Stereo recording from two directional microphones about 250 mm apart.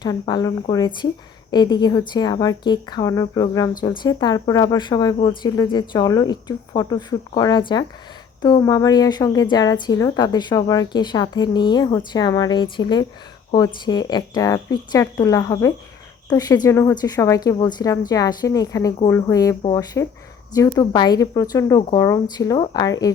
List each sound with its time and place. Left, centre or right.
0.0 s a woman's voice: centre